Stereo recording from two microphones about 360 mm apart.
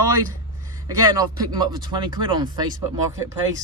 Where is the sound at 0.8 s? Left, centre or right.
Centre.